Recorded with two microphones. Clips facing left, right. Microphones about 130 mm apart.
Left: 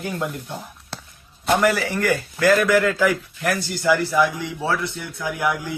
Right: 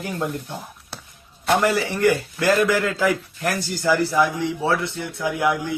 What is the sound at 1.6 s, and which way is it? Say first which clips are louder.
A man's voice: right 2 dB; 25° right (ahead or behind).